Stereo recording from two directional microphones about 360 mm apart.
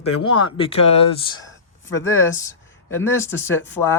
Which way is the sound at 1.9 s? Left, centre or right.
Centre.